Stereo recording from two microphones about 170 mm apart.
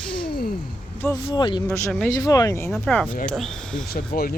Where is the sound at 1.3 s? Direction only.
25° left (ahead or behind).